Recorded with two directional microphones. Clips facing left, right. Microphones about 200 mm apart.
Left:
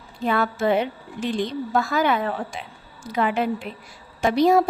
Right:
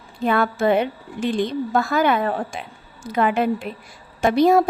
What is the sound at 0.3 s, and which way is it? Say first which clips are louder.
A woman's voice: right 3 dB; 55° right (ahead or behind).